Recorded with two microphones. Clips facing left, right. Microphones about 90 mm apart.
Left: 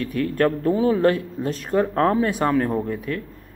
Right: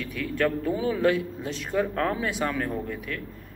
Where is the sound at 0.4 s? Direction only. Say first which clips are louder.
Left 5 dB; 40° left (ahead or behind).